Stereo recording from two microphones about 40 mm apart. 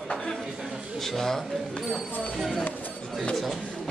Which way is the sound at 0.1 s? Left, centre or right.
Centre.